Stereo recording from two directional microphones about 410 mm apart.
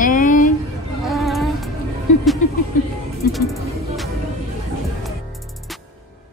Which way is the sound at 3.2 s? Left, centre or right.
Left.